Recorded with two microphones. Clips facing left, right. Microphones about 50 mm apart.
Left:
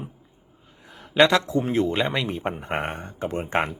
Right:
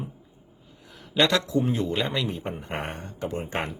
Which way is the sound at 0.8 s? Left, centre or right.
Left.